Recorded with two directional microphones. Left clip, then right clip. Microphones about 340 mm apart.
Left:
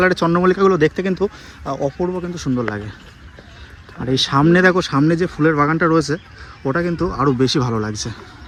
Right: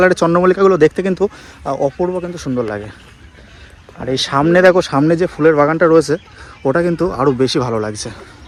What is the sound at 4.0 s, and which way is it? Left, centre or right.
Speech, centre.